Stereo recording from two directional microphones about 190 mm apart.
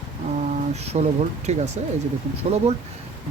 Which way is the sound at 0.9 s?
35° right (ahead or behind).